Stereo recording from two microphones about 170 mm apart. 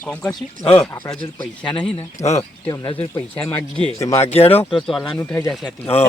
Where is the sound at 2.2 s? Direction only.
20° left (ahead or behind).